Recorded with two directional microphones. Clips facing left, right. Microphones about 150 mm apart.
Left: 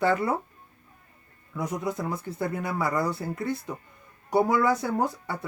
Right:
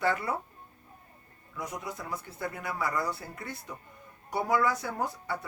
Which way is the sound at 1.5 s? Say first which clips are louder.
Left 8 dB; 25° left (ahead or behind).